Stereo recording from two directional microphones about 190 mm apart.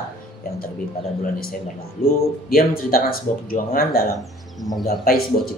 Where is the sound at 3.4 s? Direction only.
50° left (ahead or behind).